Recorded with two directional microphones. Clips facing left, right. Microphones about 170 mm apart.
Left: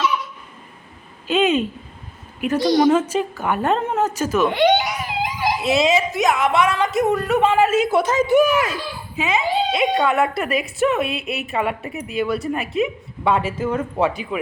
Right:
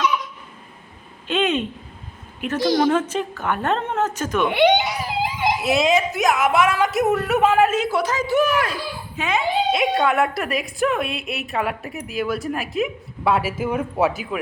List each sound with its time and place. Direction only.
1.3 s a woman's voice: 5° left (ahead or behind)
4.4 s speech: 15° right (ahead or behind)
4.9 s a sound: 30° right (ahead or behind)
5.5 s a woman's voice: centre (ahead or behind)
7.9 s a woman's voice: 25° left (ahead or behind)
8.4 s a woman's voice: 5° left (ahead or behind)